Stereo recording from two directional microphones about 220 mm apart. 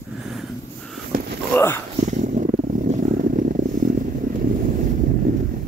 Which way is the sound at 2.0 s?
35° right (ahead or behind).